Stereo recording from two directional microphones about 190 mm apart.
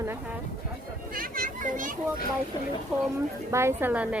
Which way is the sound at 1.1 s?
50° right (ahead or behind).